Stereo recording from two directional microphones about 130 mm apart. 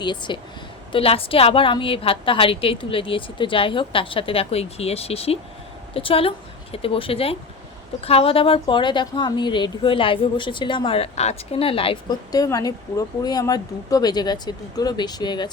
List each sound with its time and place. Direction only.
0.0 s a woman's voice: 35° left (ahead or behind)
12.3 s speech: 30° left (ahead or behind)